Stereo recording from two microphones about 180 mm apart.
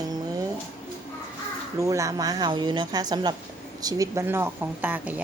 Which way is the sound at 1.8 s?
15° right (ahead or behind).